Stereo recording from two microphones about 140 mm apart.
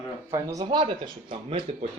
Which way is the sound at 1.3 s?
50° right (ahead or behind).